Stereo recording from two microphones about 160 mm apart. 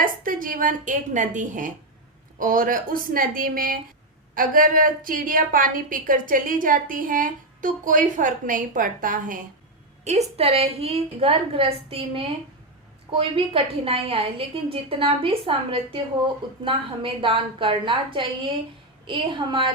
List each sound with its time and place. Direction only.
0.0 s a woman's voice: 60° right (ahead or behind)
10.0 s a woman's voice: 45° right (ahead or behind)